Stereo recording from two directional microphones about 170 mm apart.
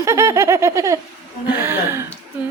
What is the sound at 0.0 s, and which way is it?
Speech, 15° right (ahead or behind).